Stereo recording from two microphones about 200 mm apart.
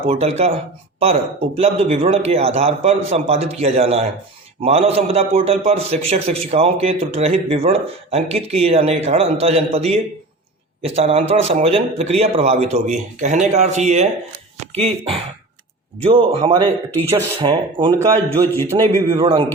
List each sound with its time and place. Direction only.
0.0 s a man's voice: 30° right (ahead or behind)
18.7 s speech: 15° right (ahead or behind)
19.2 s speech: 25° right (ahead or behind)